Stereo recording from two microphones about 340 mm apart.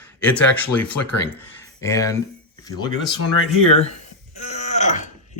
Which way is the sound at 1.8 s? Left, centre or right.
Centre.